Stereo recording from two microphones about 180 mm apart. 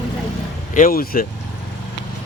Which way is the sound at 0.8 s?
50° left (ahead or behind).